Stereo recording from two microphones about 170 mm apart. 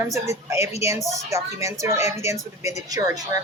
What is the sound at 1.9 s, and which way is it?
Speech, 40° left (ahead or behind).